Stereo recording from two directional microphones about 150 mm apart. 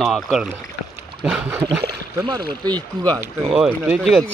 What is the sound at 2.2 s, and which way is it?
Speech, 30° right (ahead or behind).